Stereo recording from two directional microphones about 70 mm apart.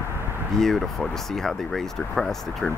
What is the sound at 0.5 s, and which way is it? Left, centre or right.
Speech, centre.